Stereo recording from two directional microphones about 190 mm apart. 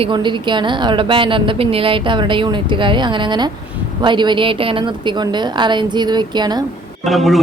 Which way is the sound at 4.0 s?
25° right (ahead or behind).